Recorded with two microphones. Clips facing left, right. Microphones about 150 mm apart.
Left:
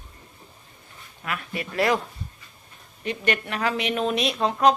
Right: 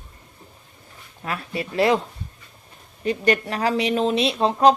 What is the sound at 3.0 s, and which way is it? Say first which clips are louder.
A woman's voice: right 5 dB; 35° right (ahead or behind).